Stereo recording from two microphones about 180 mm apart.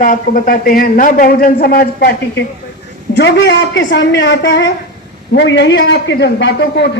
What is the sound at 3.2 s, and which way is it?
A man's voice, 75° left (ahead or behind).